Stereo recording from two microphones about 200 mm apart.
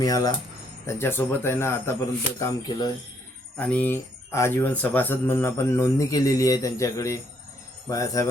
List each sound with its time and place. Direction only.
0.0 s speech: 20° left (ahead or behind)
3.6 s speech: 5° left (ahead or behind)